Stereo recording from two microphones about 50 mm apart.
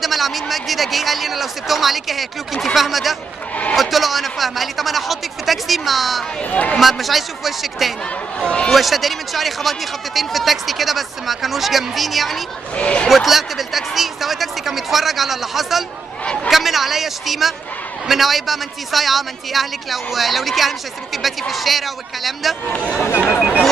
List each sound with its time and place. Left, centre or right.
0.0 s a man's voice: centre
6.5 s speech: left
6.8 s a man's voice: centre
8.4 s speech: centre
8.7 s a man's voice: centre
12.7 s speech: left
13.1 s a man's voice: centre